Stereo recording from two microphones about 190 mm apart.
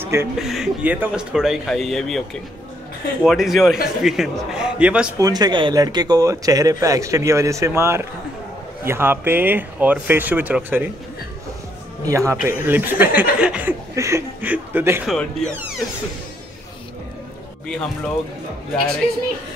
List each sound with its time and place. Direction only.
0.0 s a sound: 10° right (ahead or behind)
0.4 s a man's voice: centre (ahead or behind)
5.2 s speech: 20° right (ahead or behind)
12.1 s speech: 15° right (ahead or behind)
17.6 s a man's voice: 5° left (ahead or behind)